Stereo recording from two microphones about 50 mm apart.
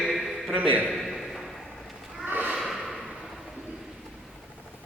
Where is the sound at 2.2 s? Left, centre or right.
Right.